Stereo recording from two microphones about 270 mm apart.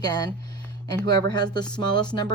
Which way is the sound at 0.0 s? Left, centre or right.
Centre.